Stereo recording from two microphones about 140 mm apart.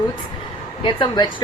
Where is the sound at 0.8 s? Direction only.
35° left (ahead or behind).